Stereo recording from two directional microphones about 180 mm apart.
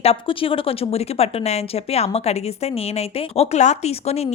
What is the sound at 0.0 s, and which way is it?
Speech, 30° left (ahead or behind).